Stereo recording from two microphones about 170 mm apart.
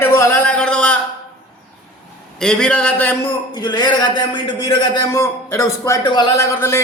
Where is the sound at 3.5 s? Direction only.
25° left (ahead or behind).